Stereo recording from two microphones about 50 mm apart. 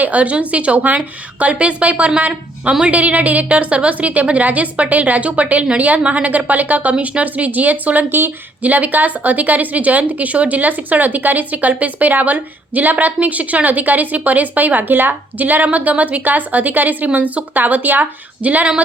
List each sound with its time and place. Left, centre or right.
0.0 s a woman's voice: right